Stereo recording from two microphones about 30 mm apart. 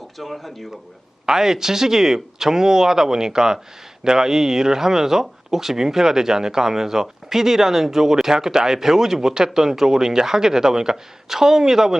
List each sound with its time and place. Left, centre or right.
0.2 s speech: centre
1.3 s speech: centre